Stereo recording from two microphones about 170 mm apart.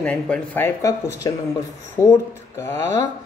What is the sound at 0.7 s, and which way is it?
A woman's voice, 20° left (ahead or behind).